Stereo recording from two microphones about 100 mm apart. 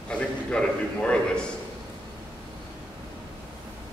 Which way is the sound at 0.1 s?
10° left (ahead or behind).